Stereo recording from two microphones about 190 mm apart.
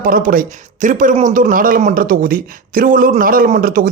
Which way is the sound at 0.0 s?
45° right (ahead or behind).